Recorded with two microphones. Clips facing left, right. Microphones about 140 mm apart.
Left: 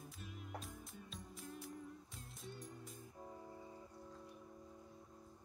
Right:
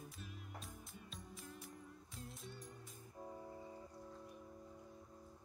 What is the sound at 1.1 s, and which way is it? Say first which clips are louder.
Music: left 3 dB; centre (ahead or behind).